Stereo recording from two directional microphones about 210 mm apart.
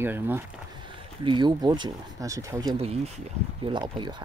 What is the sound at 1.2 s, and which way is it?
Speech, 20° right (ahead or behind).